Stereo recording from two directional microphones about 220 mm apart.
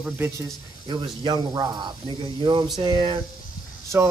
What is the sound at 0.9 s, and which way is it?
Speech, 20° right (ahead or behind).